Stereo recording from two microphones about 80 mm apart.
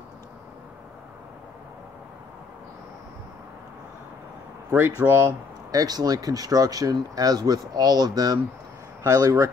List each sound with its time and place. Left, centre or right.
4.6 s speech: right
5.7 s speech: right
9.0 s speech: right